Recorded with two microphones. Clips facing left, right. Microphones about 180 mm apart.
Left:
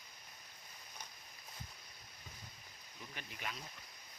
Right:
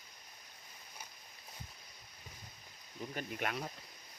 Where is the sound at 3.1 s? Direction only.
55° right (ahead or behind).